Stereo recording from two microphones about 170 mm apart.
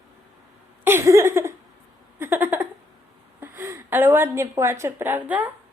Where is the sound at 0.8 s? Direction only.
15° right (ahead or behind).